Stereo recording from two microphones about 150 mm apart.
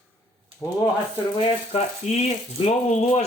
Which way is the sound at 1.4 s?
40° left (ahead or behind).